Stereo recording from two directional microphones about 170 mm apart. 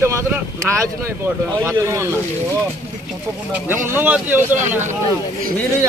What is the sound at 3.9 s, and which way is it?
Speech, 10° right (ahead or behind).